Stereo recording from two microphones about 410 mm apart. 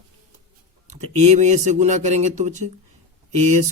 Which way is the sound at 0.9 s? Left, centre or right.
Centre.